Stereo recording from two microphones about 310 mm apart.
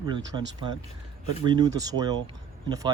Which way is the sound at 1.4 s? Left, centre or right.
Centre.